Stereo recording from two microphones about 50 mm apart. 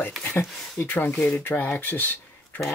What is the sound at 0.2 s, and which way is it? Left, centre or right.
Speech, left.